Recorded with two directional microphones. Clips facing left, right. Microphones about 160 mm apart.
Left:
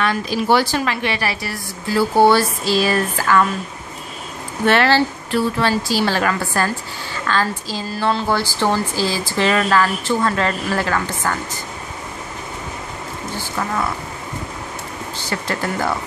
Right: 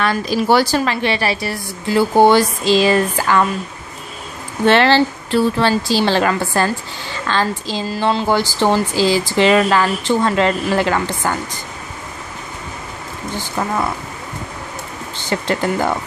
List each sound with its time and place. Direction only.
0.0 s speech: 40° right (ahead or behind); by 3.4 s 20° right (ahead or behind)
4.6 s speech: 25° right (ahead or behind)
15.2 s speech: 20° right (ahead or behind)